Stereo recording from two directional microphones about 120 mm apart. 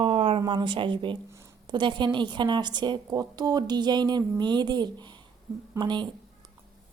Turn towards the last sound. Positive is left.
turn(degrees=-40)  # may be behind; listen again after turning